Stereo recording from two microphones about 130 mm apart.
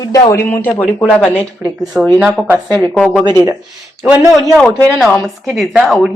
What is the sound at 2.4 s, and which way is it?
Speech, centre (ahead or behind).